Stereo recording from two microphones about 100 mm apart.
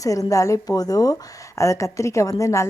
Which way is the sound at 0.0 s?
35° left (ahead or behind).